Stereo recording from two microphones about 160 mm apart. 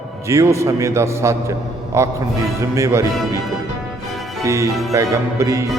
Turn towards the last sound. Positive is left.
turn(degrees=-20)  # may be behind; listen again after turning